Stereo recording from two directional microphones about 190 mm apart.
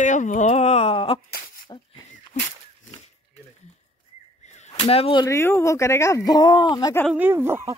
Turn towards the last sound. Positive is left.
turn(degrees=-15)  # may be behind; listen again after turning